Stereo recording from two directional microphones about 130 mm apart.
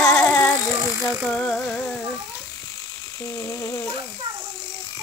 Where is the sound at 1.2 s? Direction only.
5° left (ahead or behind).